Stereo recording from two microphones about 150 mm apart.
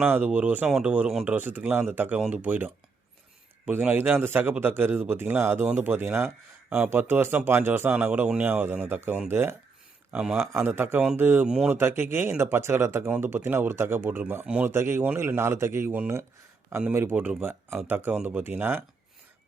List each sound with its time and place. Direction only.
0.0 s speech: 10° right (ahead or behind)
3.7 s speech: 10° right (ahead or behind)